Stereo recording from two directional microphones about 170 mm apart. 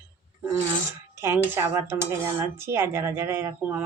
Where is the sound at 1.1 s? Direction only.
15° right (ahead or behind).